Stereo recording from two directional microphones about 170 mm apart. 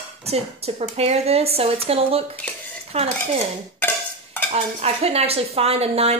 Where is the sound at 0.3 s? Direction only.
35° right (ahead or behind).